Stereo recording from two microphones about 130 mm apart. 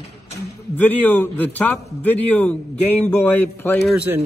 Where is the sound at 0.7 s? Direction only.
15° left (ahead or behind).